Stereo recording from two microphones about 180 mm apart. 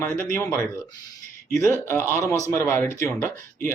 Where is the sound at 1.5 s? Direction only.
15° left (ahead or behind).